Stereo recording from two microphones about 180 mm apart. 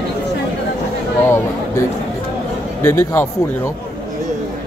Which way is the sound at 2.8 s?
15° left (ahead or behind).